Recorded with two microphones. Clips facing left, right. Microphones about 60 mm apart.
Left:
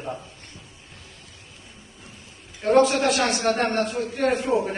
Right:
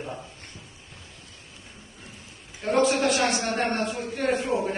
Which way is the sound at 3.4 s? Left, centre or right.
Left.